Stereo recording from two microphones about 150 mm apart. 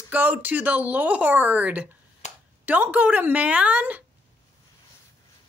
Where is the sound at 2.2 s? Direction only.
50° left (ahead or behind).